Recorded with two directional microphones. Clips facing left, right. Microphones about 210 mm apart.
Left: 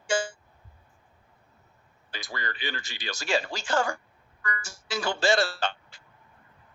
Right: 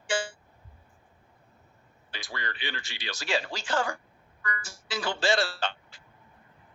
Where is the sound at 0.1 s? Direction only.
45° left (ahead or behind).